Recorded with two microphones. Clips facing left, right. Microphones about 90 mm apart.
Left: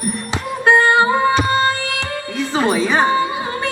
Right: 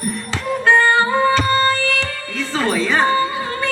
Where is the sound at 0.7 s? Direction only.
15° left (ahead or behind).